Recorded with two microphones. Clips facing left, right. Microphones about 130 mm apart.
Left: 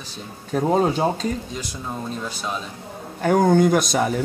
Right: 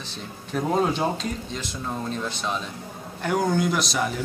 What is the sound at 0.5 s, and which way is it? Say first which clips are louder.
Speech: left 4 dB; 40° left (ahead or behind).